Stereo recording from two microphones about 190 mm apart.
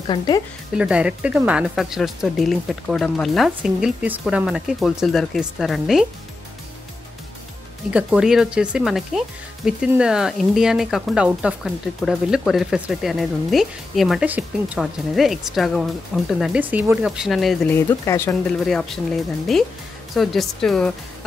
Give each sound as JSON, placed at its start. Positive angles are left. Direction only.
{"t": 0.0, "sound": "speech", "side_deg": 25}
{"t": 0.7, "sound": "speech", "side_deg": -5}
{"t": 7.9, "sound": "speech", "side_deg": -5}
{"t": 17.7, "sound": "speech", "side_deg": 15}
{"t": 18.7, "sound": "speech", "side_deg": 0}